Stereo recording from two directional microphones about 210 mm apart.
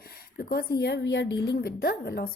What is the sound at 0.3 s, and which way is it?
Speech, 50° left (ahead or behind).